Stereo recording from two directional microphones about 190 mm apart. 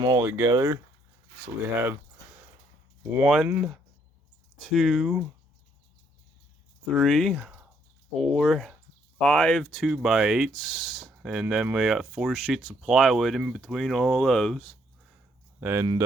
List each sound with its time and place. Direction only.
0.0 s speech: 15° right (ahead or behind)
3.1 s speech: 5° right (ahead or behind)
6.9 s speech: centre (ahead or behind)
15.6 s speech: 10° right (ahead or behind)